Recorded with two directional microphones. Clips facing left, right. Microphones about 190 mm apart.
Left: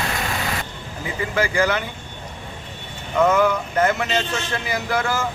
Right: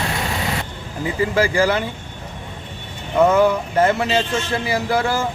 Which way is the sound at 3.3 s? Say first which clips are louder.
Right 3 dB; 30° right (ahead or behind).